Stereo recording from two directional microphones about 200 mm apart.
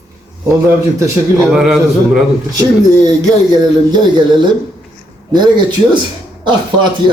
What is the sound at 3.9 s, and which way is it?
Speech, 20° right (ahead or behind).